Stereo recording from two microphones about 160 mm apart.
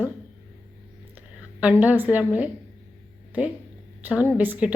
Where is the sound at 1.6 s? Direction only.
10° right (ahead or behind).